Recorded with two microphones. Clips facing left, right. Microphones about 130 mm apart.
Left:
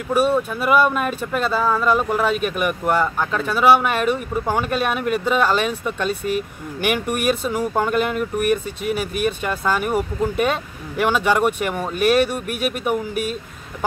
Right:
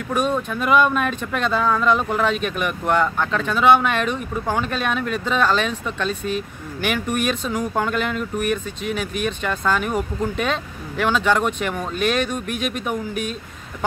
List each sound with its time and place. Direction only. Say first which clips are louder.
0.1 s speech: left 4 dB; 10° left (ahead or behind)